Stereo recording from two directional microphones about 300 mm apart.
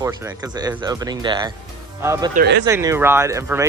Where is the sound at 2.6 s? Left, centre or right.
Centre.